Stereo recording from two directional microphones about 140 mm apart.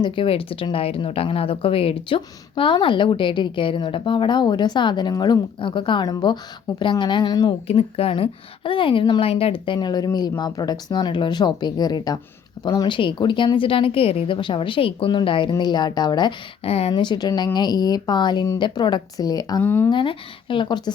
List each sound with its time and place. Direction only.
0.0 s speech: 40° left (ahead or behind)
7.7 s speech: 45° left (ahead or behind)
16.6 s speech: 45° left (ahead or behind)
16.9 s a woman's voice: 30° left (ahead or behind)
19.6 s speech: 15° left (ahead or behind)
19.9 s speech: 35° left (ahead or behind)